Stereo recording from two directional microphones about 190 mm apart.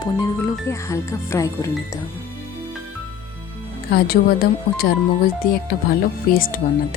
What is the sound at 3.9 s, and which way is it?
Speech, 55° left (ahead or behind).